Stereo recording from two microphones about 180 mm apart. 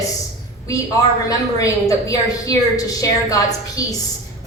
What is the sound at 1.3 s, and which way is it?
A woman's voice, 20° left (ahead or behind).